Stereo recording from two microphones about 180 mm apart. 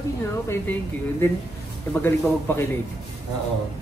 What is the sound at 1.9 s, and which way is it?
Speech, 10° left (ahead or behind).